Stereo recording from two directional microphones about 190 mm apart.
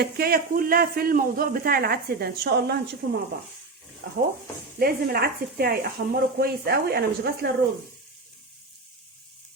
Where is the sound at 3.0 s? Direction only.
90° right.